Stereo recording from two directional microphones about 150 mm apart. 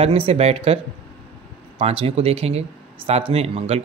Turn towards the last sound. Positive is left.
turn(degrees=-45)  # may be behind; listen again after turning